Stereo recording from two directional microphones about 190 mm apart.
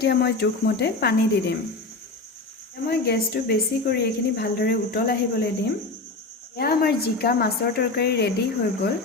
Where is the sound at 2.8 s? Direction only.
55° left (ahead or behind).